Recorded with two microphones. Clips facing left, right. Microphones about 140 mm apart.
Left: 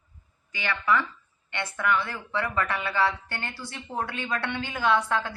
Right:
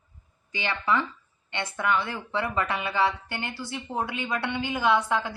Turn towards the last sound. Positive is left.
turn(degrees=-15)  # may be behind; listen again after turning